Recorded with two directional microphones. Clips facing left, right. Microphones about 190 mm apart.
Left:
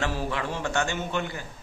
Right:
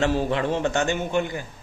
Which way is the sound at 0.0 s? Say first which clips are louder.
Right 7 dB; 25° right (ahead or behind).